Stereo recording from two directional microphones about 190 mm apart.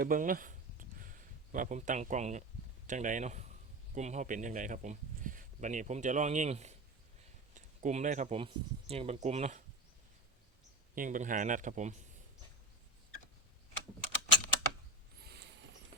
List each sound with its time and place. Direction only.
0.0 s a sound: 45° right (ahead or behind)
2.8 s a man's voice: 40° right (ahead or behind)
10.9 s speech: 45° right (ahead or behind)
15.2 s mechanisms: 60° right (ahead or behind)